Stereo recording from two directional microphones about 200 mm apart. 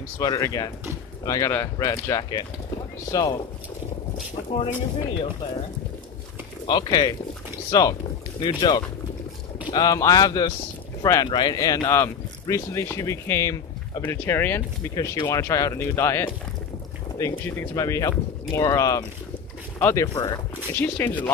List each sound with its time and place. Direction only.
0.2 s speech: 20° left (ahead or behind)
4.5 s speech: 30° left (ahead or behind)
6.6 s speech: 20° left (ahead or behind)